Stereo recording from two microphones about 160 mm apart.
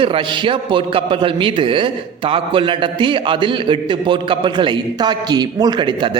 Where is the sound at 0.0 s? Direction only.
35° right (ahead or behind).